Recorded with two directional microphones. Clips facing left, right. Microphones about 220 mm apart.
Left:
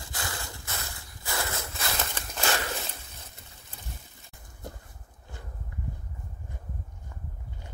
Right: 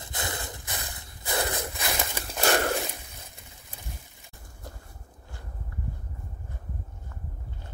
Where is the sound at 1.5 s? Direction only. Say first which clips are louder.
Right 3 dB; 15° right (ahead or behind).